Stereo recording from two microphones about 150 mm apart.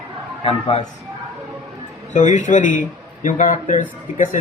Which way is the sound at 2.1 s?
55° left (ahead or behind).